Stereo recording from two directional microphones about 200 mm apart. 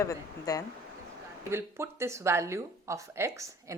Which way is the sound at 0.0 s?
15° left (ahead or behind).